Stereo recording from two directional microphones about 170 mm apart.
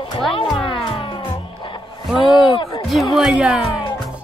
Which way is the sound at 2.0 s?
Centre (ahead or behind).